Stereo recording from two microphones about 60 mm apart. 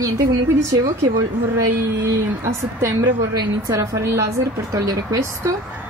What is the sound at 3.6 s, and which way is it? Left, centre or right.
Speech, right.